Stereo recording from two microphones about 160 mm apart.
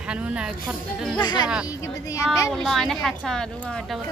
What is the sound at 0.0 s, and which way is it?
A woman's voice, 5° right (ahead or behind).